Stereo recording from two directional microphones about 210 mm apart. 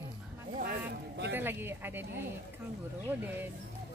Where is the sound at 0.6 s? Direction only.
50° right (ahead or behind).